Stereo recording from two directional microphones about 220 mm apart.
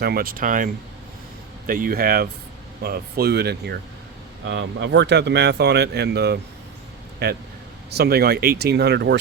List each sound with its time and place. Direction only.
0.0 s speech: 45° right (ahead or behind)